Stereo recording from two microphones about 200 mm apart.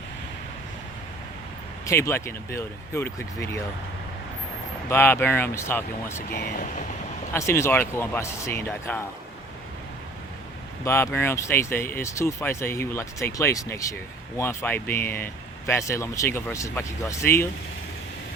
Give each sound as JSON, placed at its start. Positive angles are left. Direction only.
{"t": 1.9, "sound": "speech", "side_deg": 15}
{"t": 4.9, "sound": "speech", "side_deg": 10}
{"t": 6.3, "sound": "speech", "side_deg": 45}
{"t": 7.3, "sound": "speech", "side_deg": 15}
{"t": 10.8, "sound": "speech", "side_deg": 10}